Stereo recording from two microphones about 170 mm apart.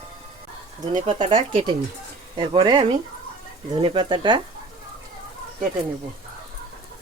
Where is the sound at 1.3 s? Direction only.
30° right (ahead or behind).